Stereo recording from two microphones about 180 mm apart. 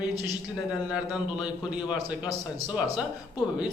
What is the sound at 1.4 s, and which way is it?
Speech, 5° right (ahead or behind).